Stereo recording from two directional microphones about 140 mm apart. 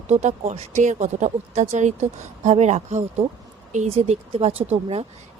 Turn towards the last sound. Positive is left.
turn(degrees=-45)  # may be behind; listen again after turning